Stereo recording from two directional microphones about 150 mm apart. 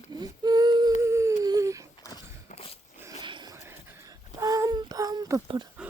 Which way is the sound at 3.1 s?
30° right (ahead or behind).